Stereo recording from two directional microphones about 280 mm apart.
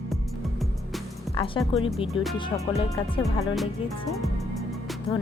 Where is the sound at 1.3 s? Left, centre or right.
Centre.